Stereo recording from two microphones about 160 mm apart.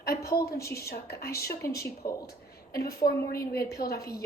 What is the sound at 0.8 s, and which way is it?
Speech, 75° left (ahead or behind).